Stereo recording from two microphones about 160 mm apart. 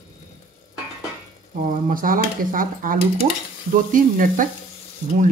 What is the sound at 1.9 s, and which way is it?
Speech, 60° right (ahead or behind).